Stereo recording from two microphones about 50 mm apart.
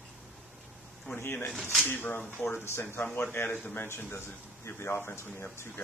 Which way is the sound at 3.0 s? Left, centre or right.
Left.